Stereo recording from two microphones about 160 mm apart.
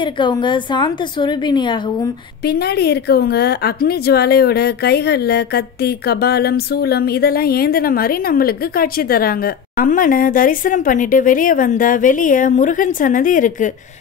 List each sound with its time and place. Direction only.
0.0 s a woman's voice: 30° left (ahead or behind)
2.4 s a woman's voice: 85° left; by 13.7 s 55° left (ahead or behind)